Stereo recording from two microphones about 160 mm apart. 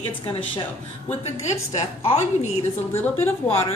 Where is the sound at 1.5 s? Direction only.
45° left (ahead or behind).